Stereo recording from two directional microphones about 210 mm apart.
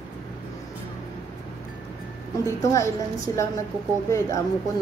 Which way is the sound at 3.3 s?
15° left (ahead or behind).